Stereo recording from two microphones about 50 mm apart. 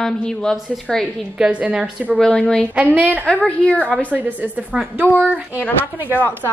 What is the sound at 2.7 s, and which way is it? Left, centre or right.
Speech, right.